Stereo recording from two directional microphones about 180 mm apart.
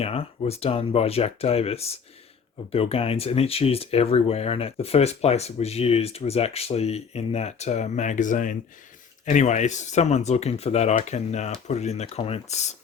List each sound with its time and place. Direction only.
0.0 s speech: 35° left (ahead or behind)